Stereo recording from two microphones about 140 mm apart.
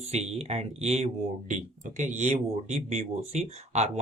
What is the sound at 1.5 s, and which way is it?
Speech, 60° right (ahead or behind).